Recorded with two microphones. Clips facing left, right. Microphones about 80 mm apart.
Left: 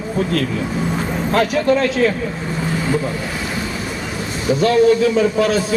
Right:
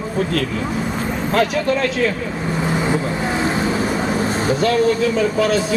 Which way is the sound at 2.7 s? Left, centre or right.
Right.